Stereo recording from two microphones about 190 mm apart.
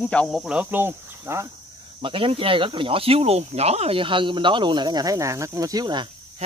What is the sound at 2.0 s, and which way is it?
Speech, 25° right (ahead or behind).